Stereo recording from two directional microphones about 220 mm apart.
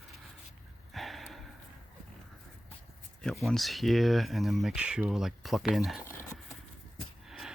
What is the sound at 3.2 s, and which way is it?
Speech, centre (ahead or behind).